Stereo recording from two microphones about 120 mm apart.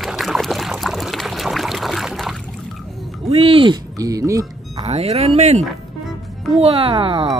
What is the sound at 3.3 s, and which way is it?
Speech, 55° right (ahead or behind).